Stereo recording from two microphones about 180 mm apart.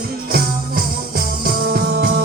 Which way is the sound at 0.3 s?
55° right (ahead or behind).